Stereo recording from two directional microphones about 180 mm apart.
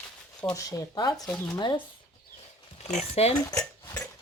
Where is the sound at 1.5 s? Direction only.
25° left (ahead or behind).